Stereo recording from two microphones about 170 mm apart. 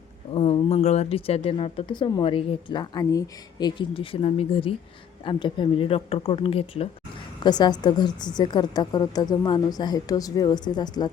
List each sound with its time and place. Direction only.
0.3 s speech: 35° left (ahead or behind)
7.4 s a woman's voice: 25° left (ahead or behind)